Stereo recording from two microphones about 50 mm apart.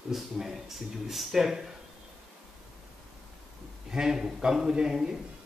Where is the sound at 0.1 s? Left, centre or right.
Centre.